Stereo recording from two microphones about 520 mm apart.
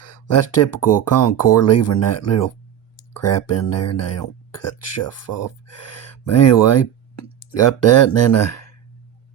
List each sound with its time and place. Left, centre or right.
0.0 s speech: left